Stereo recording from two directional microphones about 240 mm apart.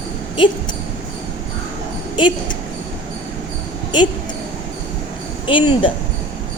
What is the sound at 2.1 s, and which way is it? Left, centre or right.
Speech, centre.